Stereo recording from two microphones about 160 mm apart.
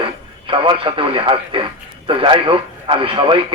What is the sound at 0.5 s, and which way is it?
A man's voice, 30° right (ahead or behind).